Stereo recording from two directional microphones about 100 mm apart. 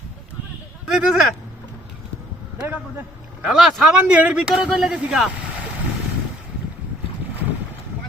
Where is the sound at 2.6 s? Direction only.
20° right (ahead or behind).